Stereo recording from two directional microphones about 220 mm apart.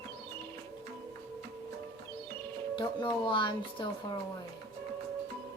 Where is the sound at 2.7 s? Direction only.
20° left (ahead or behind).